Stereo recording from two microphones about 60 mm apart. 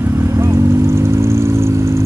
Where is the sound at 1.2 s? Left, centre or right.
Right.